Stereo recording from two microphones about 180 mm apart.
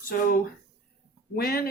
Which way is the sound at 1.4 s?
55° left (ahead or behind).